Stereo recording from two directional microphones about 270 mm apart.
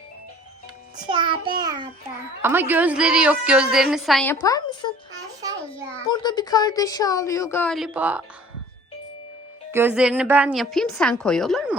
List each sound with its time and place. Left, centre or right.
1.0 s a child's voice: centre
4.4 s speech: centre
6.1 s speech: centre
9.7 s a child's voice: centre